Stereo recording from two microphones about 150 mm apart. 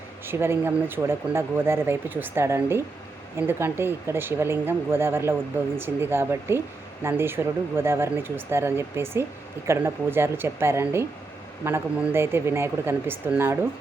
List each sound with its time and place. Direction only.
0.3 s speech: 15° right (ahead or behind)